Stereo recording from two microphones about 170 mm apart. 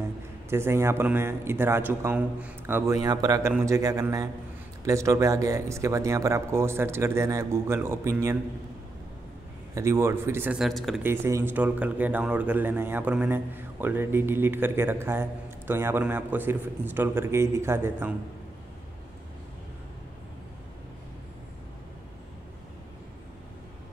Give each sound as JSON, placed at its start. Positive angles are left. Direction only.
{"t": 0.5, "sound": "a man's voice", "side_deg": -15}
{"t": 9.8, "sound": "speech", "side_deg": -15}
{"t": 11.2, "sound": "speech", "side_deg": -15}